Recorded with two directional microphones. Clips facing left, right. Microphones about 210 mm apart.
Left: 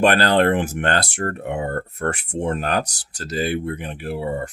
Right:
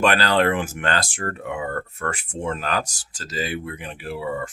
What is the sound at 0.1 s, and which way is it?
Speech, 50° left (ahead or behind).